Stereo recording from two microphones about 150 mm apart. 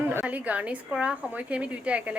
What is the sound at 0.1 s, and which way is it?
A woman's voice, 10° right (ahead or behind).